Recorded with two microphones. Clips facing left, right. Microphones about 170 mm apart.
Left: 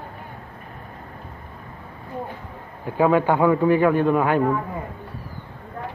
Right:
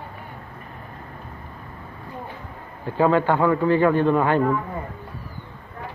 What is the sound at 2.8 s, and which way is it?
A man's voice, 10° left (ahead or behind).